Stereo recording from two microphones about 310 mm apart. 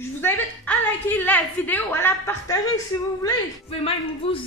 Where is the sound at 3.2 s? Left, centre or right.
Centre.